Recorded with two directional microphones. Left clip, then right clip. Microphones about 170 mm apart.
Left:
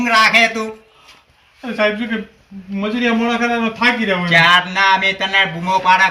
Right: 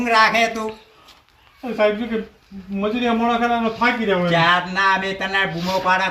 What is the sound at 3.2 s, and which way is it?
A man's voice, 10° left (ahead or behind).